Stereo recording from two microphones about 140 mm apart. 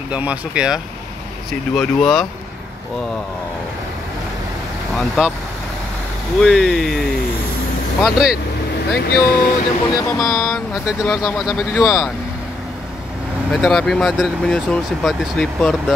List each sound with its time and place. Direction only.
0.1 s speech: 10° right (ahead or behind)
1.5 s speech: 5° left (ahead or behind)
4.9 s speech: 5° left (ahead or behind)
6.4 s speech: 5° left (ahead or behind)
9.1 s speech: 90° left
9.9 s speech: 20° left (ahead or behind)
10.2 s speech: centre (ahead or behind)
13.5 s speech: centre (ahead or behind)